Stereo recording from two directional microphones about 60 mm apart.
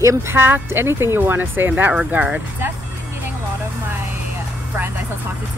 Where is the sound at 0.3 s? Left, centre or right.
Right.